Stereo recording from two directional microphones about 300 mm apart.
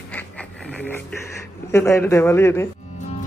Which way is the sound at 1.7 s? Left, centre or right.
Centre.